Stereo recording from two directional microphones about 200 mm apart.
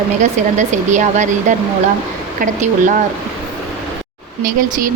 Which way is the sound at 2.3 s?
40° right (ahead or behind).